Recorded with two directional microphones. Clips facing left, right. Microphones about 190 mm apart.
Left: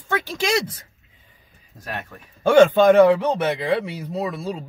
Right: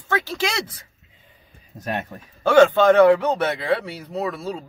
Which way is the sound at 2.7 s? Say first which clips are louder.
Left 1 dB; 15° left (ahead or behind).